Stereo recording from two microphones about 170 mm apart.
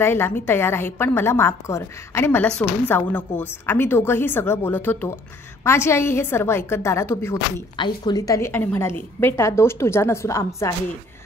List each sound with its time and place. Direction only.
0.0 s a woman's voice: 15° left (ahead or behind)
7.7 s a woman's voice: 25° left (ahead or behind)